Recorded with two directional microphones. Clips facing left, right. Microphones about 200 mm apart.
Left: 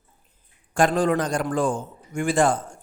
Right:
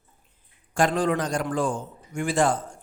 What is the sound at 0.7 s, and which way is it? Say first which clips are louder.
A man's voice: left 3 dB; 50° left (ahead or behind).